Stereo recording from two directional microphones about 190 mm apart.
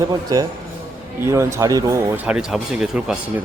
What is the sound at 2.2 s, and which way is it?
Speech, 5° right (ahead or behind).